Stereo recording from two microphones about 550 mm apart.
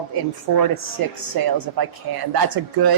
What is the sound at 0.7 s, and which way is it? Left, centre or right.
Speech, right.